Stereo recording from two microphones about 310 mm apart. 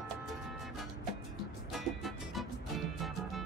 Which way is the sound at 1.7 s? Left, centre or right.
Centre.